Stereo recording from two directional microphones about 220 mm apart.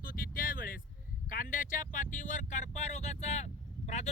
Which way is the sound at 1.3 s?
35° left (ahead or behind).